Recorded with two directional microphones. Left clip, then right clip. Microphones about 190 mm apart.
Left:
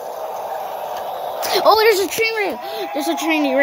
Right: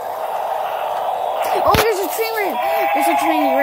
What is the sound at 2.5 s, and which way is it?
Speech, 50° right (ahead or behind).